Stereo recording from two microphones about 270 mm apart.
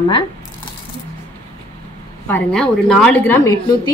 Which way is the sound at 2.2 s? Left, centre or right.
Centre.